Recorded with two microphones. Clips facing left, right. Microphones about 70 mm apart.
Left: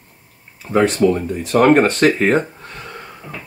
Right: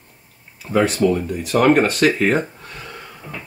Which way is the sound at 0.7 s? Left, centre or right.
Left.